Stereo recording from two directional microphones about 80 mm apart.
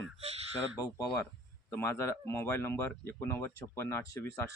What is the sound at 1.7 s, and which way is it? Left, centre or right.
Speech, left.